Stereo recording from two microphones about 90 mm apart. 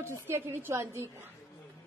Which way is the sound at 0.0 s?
30° right (ahead or behind).